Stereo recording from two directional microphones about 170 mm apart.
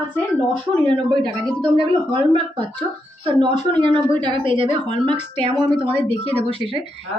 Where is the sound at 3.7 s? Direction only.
30° right (ahead or behind).